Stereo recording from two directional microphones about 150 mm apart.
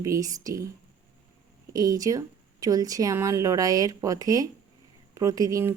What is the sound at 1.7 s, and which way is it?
A woman's voice, 25° right (ahead or behind).